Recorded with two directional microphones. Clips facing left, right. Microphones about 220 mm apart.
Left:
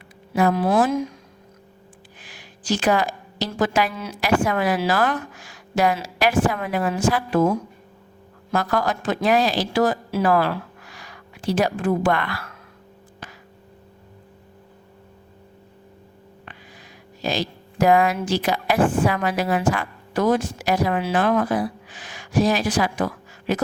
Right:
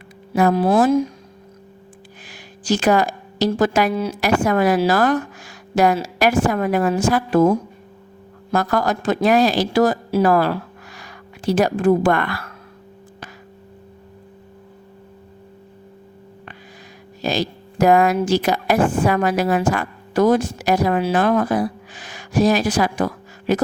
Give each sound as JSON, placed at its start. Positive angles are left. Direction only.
{"t": 0.3, "sound": "a woman's voice", "side_deg": -45}
{"t": 0.6, "sound": "speech", "side_deg": -30}
{"t": 2.2, "sound": "a woman's voice", "side_deg": -40}
{"t": 17.2, "sound": "a woman's voice", "side_deg": -45}